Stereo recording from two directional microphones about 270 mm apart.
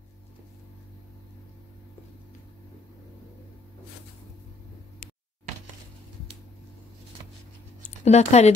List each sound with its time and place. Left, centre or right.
8.0 s speech: left